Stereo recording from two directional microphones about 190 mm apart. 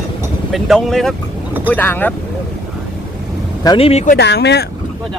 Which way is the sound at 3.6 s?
30° left (ahead or behind).